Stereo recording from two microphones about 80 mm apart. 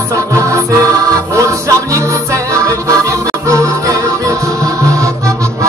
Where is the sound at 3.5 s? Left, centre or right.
Right.